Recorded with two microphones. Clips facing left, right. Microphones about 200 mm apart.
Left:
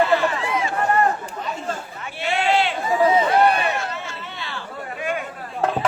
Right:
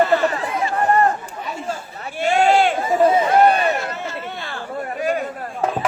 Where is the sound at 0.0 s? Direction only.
40° right (ahead or behind).